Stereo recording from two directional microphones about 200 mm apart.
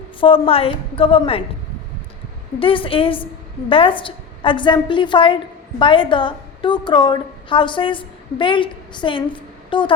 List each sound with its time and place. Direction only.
0.2 s a woman's voice: 25° left (ahead or behind)
2.6 s a woman's voice: 25° left (ahead or behind)